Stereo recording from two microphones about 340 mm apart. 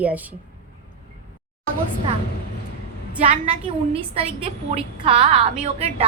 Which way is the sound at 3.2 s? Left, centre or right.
Centre.